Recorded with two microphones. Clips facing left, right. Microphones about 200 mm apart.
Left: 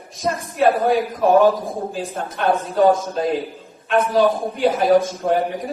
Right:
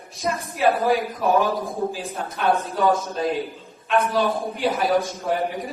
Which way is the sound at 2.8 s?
50° left (ahead or behind).